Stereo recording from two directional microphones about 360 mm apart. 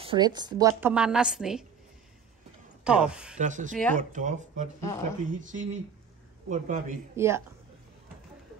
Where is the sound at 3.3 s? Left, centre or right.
Right.